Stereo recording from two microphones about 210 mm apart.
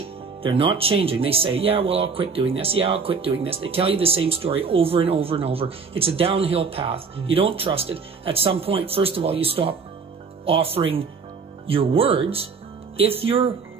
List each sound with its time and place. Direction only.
0.4 s speech: 25° right (ahead or behind)